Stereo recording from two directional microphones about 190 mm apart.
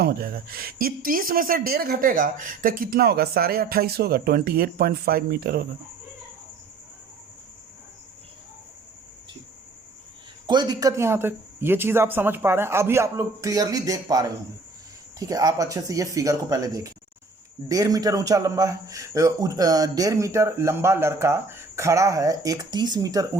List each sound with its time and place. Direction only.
0.0 s speech: 50° right (ahead or behind)
10.4 s speech: 20° right (ahead or behind)